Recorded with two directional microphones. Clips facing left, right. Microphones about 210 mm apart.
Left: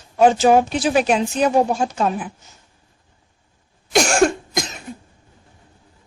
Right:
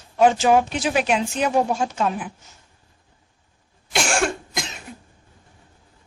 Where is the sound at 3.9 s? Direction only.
40° left (ahead or behind).